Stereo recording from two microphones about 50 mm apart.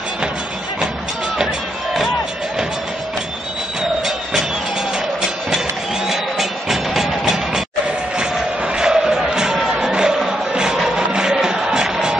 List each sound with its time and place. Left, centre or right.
6.0 s music: centre
8.7 s music: centre